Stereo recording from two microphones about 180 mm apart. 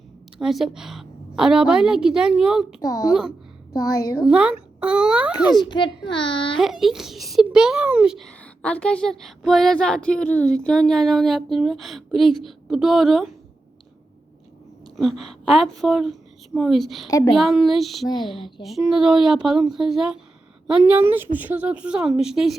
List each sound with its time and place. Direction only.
0.3 s a woman's voice: centre (ahead or behind)
2.8 s a woman's voice: 20° left (ahead or behind)
3.1 s a child's voice: 5° right (ahead or behind)
3.7 s a woman's voice: 20° left (ahead or behind)
4.2 s a child's voice: 5° right (ahead or behind)
5.6 s a woman's voice: 25° left (ahead or behind)
6.6 s a child's voice: centre (ahead or behind)
14.9 s a child's voice: centre (ahead or behind)